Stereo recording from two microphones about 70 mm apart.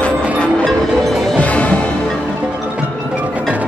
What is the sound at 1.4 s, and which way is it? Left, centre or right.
Music, centre.